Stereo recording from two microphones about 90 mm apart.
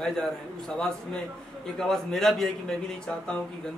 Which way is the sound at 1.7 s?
5° left (ahead or behind).